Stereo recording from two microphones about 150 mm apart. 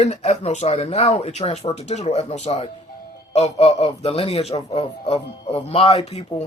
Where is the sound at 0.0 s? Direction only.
50° left (ahead or behind).